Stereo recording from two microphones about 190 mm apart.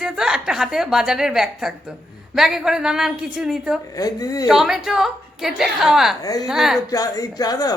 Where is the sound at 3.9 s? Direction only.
20° left (ahead or behind).